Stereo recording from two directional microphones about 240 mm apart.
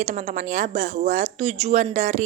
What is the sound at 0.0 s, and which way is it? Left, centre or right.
Speech, right.